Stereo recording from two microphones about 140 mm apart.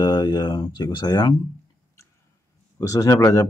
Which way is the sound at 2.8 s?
20° left (ahead or behind).